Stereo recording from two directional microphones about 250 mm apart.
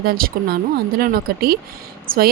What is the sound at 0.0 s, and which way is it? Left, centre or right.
A woman's voice, right.